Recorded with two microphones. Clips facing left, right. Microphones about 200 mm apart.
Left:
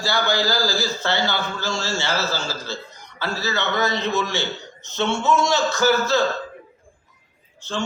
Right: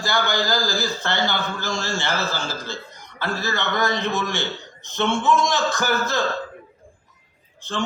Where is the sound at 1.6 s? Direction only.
15° right (ahead or behind).